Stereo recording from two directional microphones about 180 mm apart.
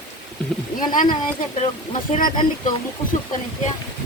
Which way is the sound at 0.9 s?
45° left (ahead or behind).